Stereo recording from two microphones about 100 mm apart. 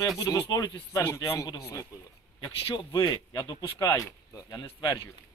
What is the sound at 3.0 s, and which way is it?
Speech, 40° left (ahead or behind).